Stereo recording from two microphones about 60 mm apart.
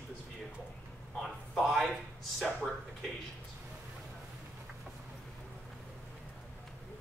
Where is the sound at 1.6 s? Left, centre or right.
Centre.